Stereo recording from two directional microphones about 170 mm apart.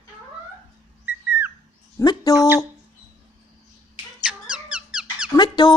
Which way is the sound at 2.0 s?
20° left (ahead or behind).